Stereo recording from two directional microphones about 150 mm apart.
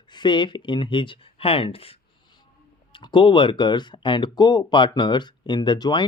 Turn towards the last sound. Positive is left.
turn(degrees=30)  # may be behind; listen again after turning